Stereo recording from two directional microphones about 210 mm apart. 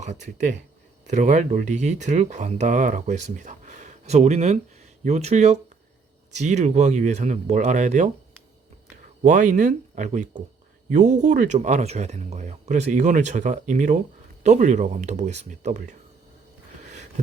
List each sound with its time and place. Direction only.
0.3 s speech: 35° right (ahead or behind)
9.2 s speech: 35° right (ahead or behind)
16.8 s a sound: 35° right (ahead or behind)